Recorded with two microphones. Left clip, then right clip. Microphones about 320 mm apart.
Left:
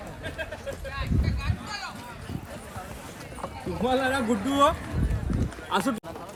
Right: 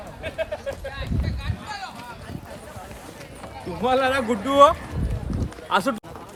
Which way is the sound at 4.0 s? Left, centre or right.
Centre.